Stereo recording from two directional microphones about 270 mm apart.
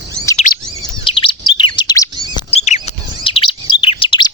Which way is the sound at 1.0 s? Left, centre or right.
Centre.